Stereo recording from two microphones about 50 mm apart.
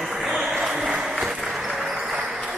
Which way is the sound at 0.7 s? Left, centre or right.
Centre.